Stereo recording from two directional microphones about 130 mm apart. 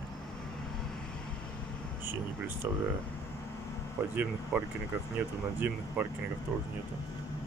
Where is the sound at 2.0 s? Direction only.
15° right (ahead or behind).